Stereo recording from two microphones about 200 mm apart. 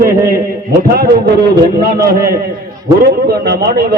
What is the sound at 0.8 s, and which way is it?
Speech, 50° right (ahead or behind).